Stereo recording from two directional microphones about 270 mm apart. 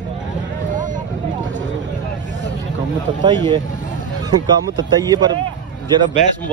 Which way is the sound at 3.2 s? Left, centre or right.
Centre.